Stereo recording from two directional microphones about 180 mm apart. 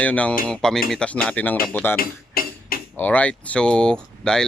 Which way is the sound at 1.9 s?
55° left (ahead or behind).